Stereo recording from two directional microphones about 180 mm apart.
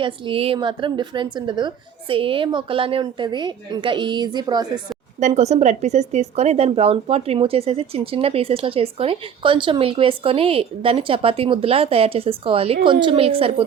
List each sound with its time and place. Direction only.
0.0 s a woman's voice: 30° right (ahead or behind)
5.2 s speech: 40° right (ahead or behind)